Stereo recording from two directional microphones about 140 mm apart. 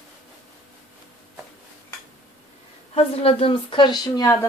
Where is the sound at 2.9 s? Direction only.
45° left (ahead or behind); by 4.4 s 25° left (ahead or behind).